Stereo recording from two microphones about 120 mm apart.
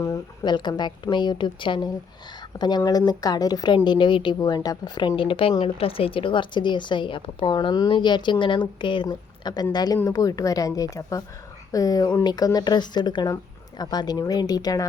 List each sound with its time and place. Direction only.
0.4 s a woman's voice: 40° left (ahead or behind)